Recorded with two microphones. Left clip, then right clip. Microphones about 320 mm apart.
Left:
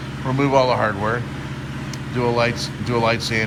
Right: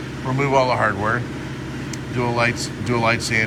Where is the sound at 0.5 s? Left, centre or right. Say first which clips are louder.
Even; centre.